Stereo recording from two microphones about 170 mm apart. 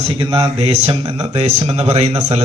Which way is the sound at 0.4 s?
35° right (ahead or behind).